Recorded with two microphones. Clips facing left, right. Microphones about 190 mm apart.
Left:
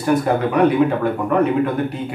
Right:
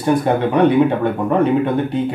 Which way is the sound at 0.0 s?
30° right (ahead or behind).